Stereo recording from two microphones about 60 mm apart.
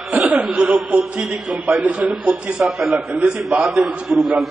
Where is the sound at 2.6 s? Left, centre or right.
Centre.